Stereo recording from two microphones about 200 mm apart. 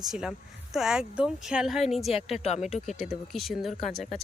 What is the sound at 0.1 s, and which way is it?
Speech, centre (ahead or behind).